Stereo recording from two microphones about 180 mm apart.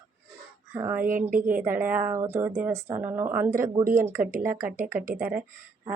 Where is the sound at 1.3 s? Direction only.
50° right (ahead or behind).